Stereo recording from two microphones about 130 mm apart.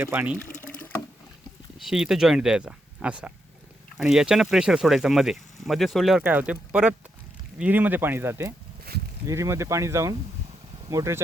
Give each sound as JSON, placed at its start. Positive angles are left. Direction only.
{"t": 0.0, "sound": "speech", "side_deg": -15}
{"t": 1.8, "sound": "speech", "side_deg": -5}
{"t": 6.2, "sound": "speech", "side_deg": -10}